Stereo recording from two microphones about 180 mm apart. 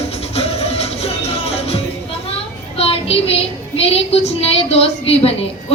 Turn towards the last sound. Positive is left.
turn(degrees=35)  # may be behind; listen again after turning